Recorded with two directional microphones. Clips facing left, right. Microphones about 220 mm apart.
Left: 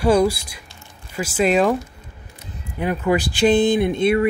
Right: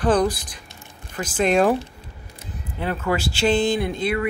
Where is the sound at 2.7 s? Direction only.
15° left (ahead or behind).